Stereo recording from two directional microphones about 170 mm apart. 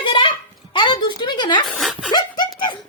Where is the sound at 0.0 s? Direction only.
30° left (ahead or behind).